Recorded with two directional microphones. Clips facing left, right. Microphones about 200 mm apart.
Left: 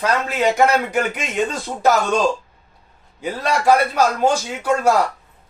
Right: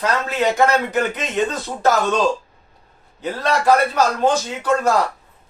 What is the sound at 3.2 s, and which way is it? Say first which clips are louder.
A man's voice: even; 10° left (ahead or behind).